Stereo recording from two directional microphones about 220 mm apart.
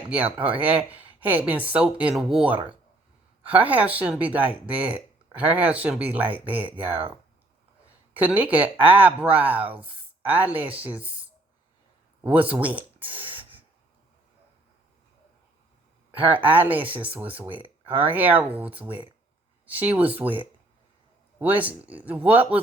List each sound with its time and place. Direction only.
0.3 s speech: 5° right (ahead or behind)
8.1 s speech: 5° right (ahead or behind)
9.8 s a sound: 10° right (ahead or behind)
10.5 s speech: 5° right (ahead or behind)
12.2 s speech: 5° right (ahead or behind)
13.1 s a sound: 25° right (ahead or behind)
16.2 s speech: 10° right (ahead or behind)
17.5 s speech: 25° right (ahead or behind)
17.9 s speech: 10° right (ahead or behind)